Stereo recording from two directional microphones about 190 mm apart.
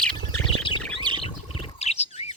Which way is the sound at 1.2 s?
30° left (ahead or behind).